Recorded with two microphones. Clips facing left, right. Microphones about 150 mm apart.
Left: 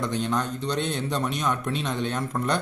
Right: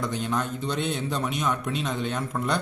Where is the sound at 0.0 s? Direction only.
5° right (ahead or behind).